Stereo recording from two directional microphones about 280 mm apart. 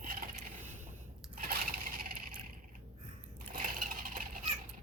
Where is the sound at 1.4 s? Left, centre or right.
Right.